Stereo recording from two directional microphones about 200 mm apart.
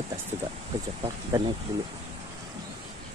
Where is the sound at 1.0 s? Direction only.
25° right (ahead or behind).